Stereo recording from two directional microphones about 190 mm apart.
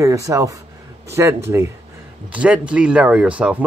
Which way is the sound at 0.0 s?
15° right (ahead or behind).